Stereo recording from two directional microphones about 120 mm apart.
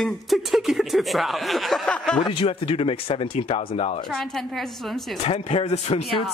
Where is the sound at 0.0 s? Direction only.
Centre (ahead or behind).